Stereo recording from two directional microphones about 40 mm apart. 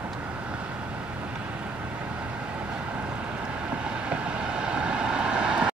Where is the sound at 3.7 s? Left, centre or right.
Right.